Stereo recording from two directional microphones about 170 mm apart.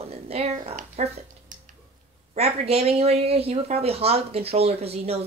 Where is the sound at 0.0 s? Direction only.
35° right (ahead or behind).